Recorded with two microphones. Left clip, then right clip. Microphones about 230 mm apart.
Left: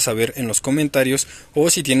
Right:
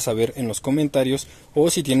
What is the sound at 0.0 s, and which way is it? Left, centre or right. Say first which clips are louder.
Speech: left 2 dB; centre.